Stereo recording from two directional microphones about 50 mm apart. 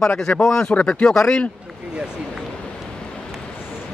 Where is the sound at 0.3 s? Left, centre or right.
Left.